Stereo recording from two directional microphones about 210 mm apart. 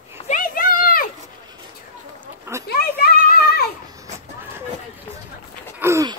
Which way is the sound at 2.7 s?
45° left (ahead or behind).